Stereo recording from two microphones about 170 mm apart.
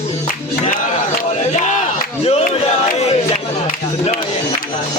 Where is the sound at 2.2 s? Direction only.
35° left (ahead or behind).